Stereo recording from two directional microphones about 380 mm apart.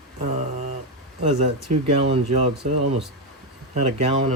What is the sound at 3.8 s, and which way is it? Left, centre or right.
Speech, centre.